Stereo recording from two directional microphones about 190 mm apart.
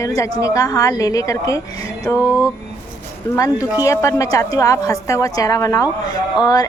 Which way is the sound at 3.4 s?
20° left (ahead or behind).